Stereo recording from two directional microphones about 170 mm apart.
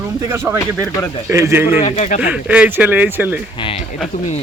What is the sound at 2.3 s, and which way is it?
Speech, 5° right (ahead or behind).